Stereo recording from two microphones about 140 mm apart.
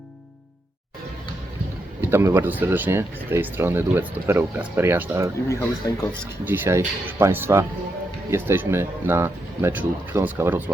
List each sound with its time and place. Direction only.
2.0 s speech: 15° right (ahead or behind)
5.8 s speech: 30° left (ahead or behind)
6.4 s speech: 15° right (ahead or behind)